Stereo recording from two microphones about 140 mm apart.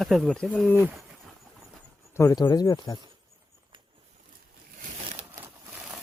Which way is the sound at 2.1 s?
20° left (ahead or behind).